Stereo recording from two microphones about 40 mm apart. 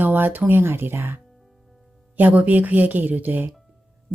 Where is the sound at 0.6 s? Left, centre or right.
Right.